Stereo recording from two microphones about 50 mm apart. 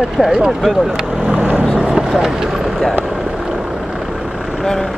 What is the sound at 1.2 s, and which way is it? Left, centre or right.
Vehicle, centre.